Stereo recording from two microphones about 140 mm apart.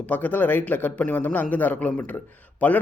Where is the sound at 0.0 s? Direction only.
10° left (ahead or behind).